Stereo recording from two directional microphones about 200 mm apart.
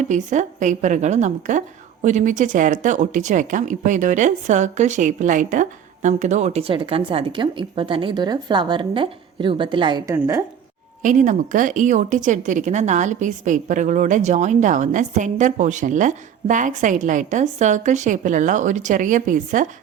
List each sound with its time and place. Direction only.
0.0 s a woman's voice: 40° right (ahead or behind); by 10.4 s 15° right (ahead or behind)
11.0 s a woman's voice: 40° right (ahead or behind)